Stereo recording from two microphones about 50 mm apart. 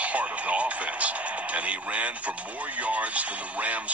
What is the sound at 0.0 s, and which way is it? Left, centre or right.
Speech, right.